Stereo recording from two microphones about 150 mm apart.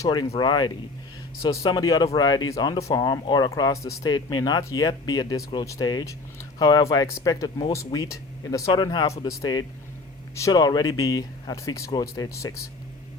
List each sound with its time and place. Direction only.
0.0 s speech: 30° left (ahead or behind)